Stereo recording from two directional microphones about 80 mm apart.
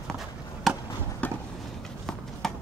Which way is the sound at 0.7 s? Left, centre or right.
Centre.